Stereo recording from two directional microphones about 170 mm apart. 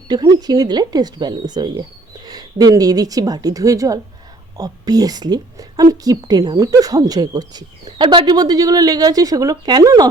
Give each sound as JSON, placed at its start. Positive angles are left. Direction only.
{"t": 0.1, "sound": "a woman's voice", "side_deg": -25}